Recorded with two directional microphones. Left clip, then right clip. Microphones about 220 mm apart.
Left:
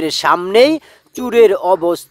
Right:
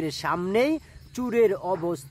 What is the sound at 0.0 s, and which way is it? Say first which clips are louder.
Speech: left 13 dB; 40° left (ahead or behind).